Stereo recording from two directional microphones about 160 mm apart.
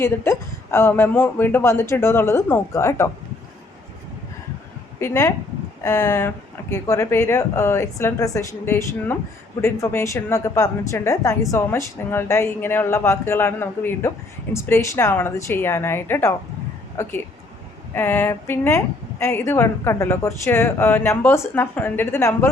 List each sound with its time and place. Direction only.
0.0 s speech: 15° left (ahead or behind)
4.9 s a woman's voice: 20° left (ahead or behind)